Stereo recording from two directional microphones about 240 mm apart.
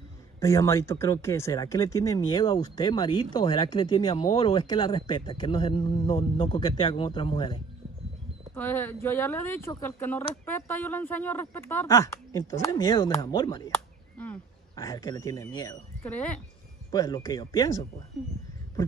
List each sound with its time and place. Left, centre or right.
0.4 s speech: centre
8.5 s speech: centre
14.1 s speech: centre
18.1 s speech: centre